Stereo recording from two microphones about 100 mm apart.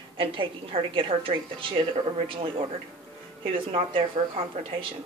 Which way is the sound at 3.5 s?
60° right (ahead or behind).